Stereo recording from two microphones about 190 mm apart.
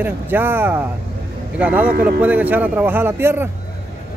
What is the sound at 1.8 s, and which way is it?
Speech, 50° right (ahead or behind).